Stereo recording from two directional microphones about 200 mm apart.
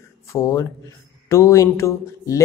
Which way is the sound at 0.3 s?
15° left (ahead or behind).